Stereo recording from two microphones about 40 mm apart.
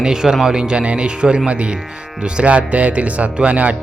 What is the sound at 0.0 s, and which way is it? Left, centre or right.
Speech, centre.